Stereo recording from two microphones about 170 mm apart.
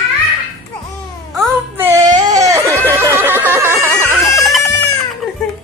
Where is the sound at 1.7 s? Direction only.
15° right (ahead or behind).